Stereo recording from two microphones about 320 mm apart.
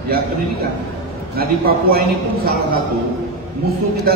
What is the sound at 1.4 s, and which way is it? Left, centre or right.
Speech, right.